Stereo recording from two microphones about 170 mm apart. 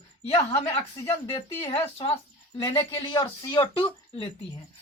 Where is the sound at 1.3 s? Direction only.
30° left (ahead or behind).